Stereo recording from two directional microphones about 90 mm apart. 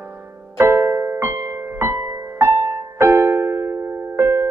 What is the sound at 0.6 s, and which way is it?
Music, 30° right (ahead or behind).